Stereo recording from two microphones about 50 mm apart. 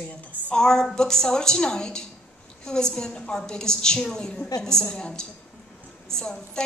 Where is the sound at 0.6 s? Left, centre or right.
Centre.